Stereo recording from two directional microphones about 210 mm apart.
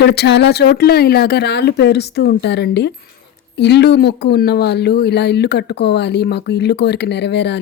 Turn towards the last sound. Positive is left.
turn(degrees=55)  # may be behind; listen again after turning